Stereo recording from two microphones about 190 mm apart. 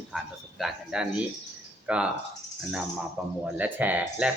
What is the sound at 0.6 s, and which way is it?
Speech, 5° right (ahead or behind).